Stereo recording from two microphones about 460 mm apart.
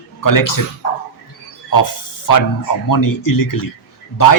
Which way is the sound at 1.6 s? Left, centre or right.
Left.